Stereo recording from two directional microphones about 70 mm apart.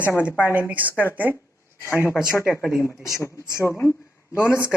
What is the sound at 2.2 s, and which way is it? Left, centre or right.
Speech, centre.